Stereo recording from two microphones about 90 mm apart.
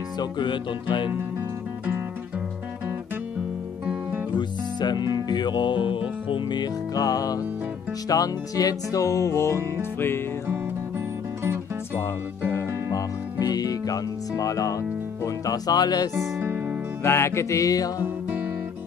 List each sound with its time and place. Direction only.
0.2 s music: 60° left (ahead or behind)
4.4 s music: 55° left (ahead or behind); by 10.2 s 25° left (ahead or behind)
11.4 s music: 25° right (ahead or behind)
12.9 s music: 45° left (ahead or behind)
16.3 s music: 20° right (ahead or behind)
17.0 s music: 30° left (ahead or behind)
18.0 s music: 20° right (ahead or behind)